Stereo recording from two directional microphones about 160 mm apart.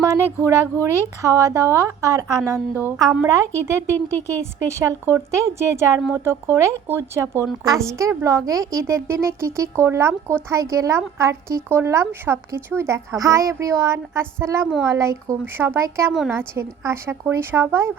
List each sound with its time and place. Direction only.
0.0 s speech: 20° right (ahead or behind)